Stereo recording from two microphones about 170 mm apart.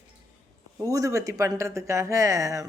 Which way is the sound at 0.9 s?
20° right (ahead or behind).